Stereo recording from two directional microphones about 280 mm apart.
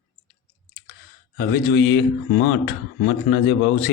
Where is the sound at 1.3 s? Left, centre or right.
Left.